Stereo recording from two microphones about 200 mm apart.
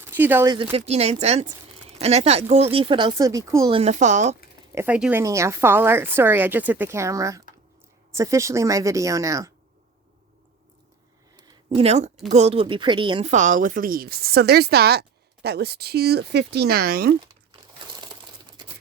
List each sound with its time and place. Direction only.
0.0 s speech: 10° right (ahead or behind)
0.5 s speech: 25° right (ahead or behind)
3.8 s speech: 35° right (ahead or behind)
4.7 s a woman's voice: 10° right (ahead or behind)
11.3 s a sound: 20° right (ahead or behind)
12.3 s a woman's voice: 30° right (ahead or behind); by 17.1 s 50° right (ahead or behind)